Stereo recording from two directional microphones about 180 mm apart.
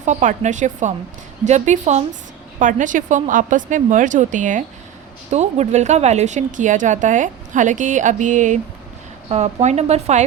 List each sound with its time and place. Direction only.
0.0 s a woman's voice: 40° right (ahead or behind)